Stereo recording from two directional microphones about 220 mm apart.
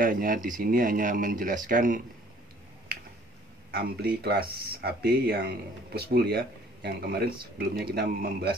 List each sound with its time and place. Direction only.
0.0 s speech: 40° right (ahead or behind)
3.7 s speech: 45° right (ahead or behind)